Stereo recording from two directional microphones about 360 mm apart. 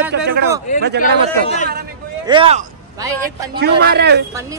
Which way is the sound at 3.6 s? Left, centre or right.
Right.